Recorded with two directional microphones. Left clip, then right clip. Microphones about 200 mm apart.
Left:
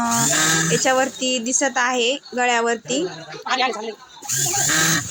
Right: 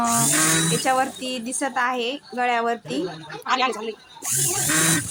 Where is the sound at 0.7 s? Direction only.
5° left (ahead or behind).